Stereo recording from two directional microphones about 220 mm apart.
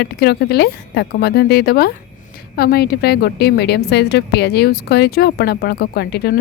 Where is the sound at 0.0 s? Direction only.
45° left (ahead or behind).